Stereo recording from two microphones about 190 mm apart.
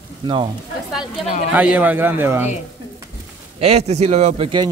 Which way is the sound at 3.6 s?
35° right (ahead or behind).